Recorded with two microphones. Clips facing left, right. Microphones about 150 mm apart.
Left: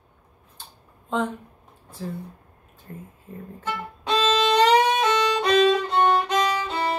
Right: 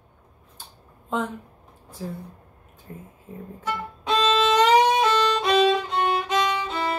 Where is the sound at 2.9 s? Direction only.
15° right (ahead or behind).